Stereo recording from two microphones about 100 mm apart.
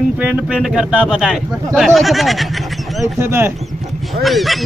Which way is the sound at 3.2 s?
25° right (ahead or behind).